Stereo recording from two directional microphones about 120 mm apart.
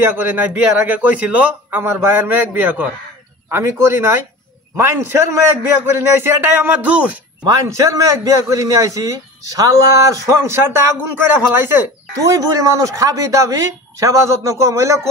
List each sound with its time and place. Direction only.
0.0 s a man's voice: 15° right (ahead or behind)
7.4 s a man's voice: 30° right (ahead or behind)